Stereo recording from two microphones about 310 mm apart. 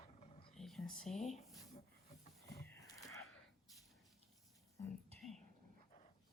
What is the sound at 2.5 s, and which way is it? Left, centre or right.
Livestock, centre.